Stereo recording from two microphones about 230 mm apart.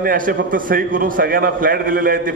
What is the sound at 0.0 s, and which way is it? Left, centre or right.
A man's voice, right.